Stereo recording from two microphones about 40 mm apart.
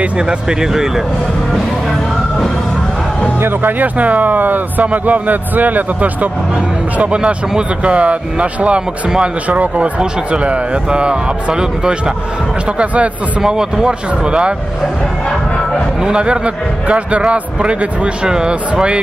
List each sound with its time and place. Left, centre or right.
0.2 s a man's voice: right
0.6 s speech: centre
3.3 s speech: right
3.8 s a man's voice: right
7.0 s a man's voice: right
12.7 s speech: right
13.4 s a man's voice: centre
16.0 s a man's voice: right